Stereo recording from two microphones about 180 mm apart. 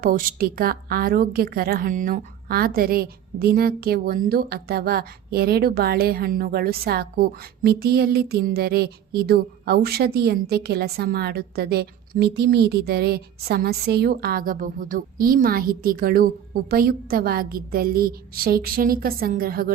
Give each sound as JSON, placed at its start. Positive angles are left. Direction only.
{"t": 0.0, "sound": "a woman's voice", "side_deg": -50}